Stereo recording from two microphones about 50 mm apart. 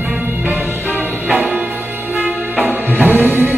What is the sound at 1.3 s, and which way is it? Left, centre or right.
Music, right.